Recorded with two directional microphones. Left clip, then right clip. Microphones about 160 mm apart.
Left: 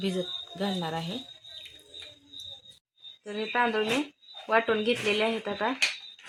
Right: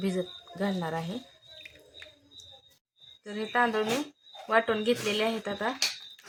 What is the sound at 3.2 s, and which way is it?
Speech, 30° left (ahead or behind).